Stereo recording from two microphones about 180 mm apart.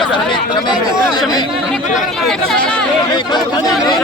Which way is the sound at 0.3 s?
25° left (ahead or behind).